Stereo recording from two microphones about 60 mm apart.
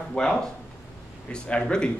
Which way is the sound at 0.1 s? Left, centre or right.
Centre.